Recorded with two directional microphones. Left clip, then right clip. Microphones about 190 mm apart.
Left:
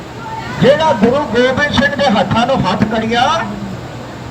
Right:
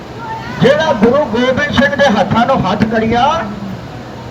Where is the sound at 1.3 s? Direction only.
20° right (ahead or behind).